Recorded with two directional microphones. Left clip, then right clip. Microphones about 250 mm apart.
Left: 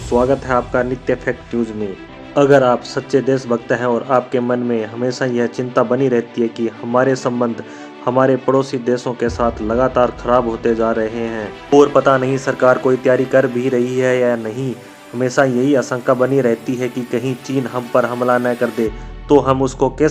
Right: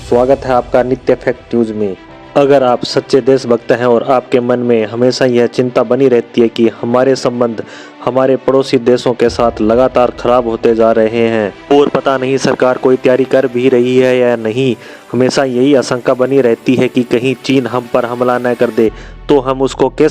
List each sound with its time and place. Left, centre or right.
0.1 s a man's voice: centre
2.3 s speech: right